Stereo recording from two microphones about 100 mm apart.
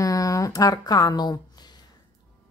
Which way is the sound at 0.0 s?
35° left (ahead or behind).